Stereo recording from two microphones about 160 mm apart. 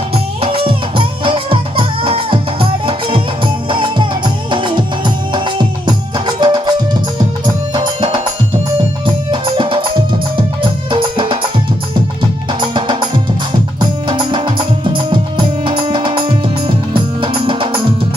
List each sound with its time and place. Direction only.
0.1 s music: 35° right (ahead or behind)
9.3 s music: 30° right (ahead or behind)
12.5 s music: 30° right (ahead or behind)
15.6 s music: 30° right (ahead or behind)